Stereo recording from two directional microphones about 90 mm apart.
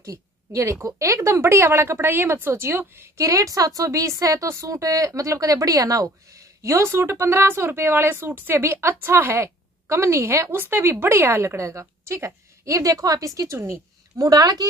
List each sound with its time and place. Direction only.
0.0 s a woman's voice: 35° right (ahead or behind)
3.2 s a woman's voice: 40° right (ahead or behind)